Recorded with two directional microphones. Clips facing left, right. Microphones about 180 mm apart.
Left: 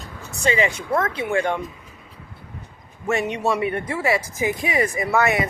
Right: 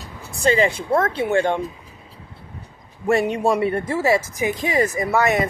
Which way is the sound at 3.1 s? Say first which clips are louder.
Right 4 dB; 35° right (ahead or behind).